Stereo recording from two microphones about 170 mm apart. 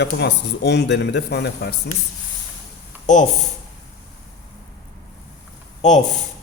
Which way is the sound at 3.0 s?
45° left (ahead or behind).